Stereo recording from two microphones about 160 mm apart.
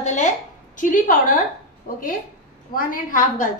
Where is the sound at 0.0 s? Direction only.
50° left (ahead or behind).